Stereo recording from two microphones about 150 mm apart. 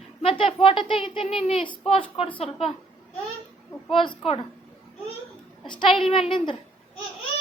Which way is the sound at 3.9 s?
35° left (ahead or behind).